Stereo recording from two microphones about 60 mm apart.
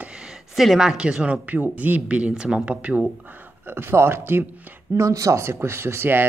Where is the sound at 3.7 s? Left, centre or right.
Right.